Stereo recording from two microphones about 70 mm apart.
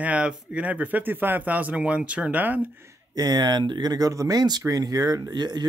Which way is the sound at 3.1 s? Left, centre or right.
Right.